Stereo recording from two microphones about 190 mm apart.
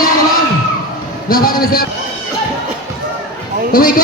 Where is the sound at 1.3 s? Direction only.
50° left (ahead or behind).